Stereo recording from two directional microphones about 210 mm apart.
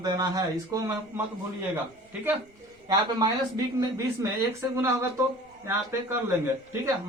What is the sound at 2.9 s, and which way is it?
Speech, 20° right (ahead or behind).